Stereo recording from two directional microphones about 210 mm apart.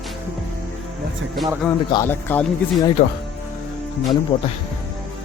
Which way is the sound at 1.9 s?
10° left (ahead or behind).